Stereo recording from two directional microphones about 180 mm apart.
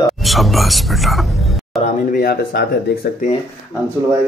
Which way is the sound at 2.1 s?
55° left (ahead or behind).